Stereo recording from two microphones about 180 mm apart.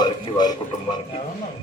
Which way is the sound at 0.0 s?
25° left (ahead or behind).